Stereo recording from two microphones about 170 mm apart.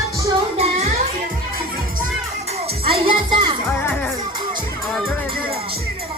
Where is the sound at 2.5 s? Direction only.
35° right (ahead or behind).